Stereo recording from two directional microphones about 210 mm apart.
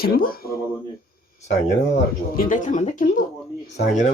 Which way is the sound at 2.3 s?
40° left (ahead or behind).